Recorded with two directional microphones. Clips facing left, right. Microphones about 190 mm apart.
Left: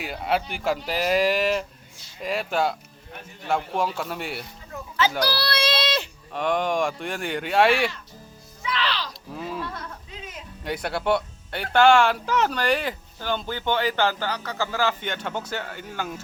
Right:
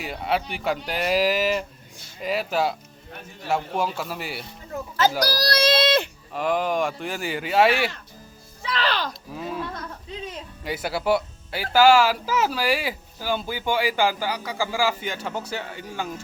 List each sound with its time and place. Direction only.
0.0 s speech: centre (ahead or behind)
5.2 s a child's voice: 40° right (ahead or behind)
6.3 s speech: centre (ahead or behind)
8.6 s speech: 40° right (ahead or behind)
9.3 s a sound: centre (ahead or behind)
10.6 s speech: centre (ahead or behind)